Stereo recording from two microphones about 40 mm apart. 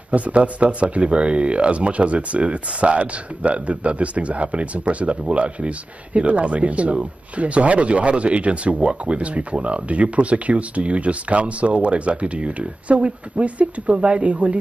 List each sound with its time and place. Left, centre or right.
0.1 s speech: right